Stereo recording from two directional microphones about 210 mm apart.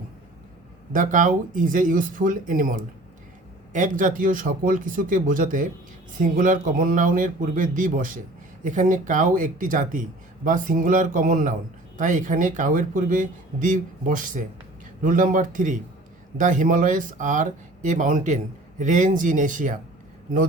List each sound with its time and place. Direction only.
0.9 s speech: 40° right (ahead or behind)